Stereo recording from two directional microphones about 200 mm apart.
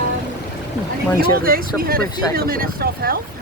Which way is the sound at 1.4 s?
45° right (ahead or behind).